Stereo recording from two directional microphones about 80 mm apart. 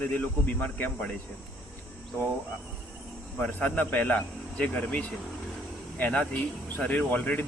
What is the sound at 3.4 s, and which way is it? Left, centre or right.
Speech, centre.